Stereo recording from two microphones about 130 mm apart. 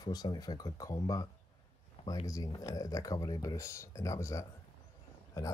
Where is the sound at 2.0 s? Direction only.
55° left (ahead or behind).